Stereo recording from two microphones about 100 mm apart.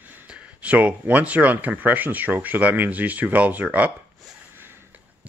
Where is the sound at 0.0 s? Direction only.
20° right (ahead or behind).